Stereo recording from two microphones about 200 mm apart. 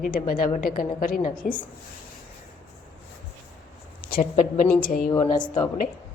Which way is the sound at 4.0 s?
50° left (ahead or behind).